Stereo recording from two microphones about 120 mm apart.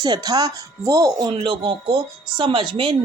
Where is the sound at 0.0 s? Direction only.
35° right (ahead or behind).